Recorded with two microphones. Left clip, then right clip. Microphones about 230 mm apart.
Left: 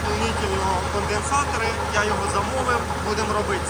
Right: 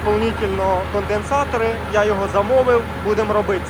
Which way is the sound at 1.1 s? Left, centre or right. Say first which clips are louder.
Right 4 dB; centre.